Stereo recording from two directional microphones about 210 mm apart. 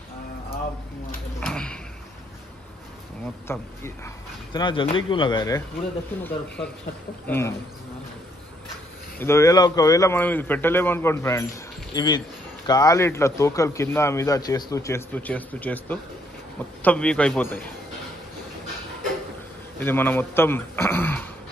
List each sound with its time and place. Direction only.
1.4 s a sound: 5° left (ahead or behind)
3.4 s speech: 10° left (ahead or behind)
4.6 s speech: 25° left (ahead or behind)
6.2 s speech: 5° left (ahead or behind)
9.2 s a man's voice: 15° left (ahead or behind)
19.8 s speech: 10° left (ahead or behind)